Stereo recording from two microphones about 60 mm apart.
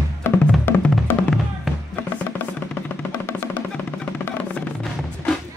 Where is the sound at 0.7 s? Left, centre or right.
Left.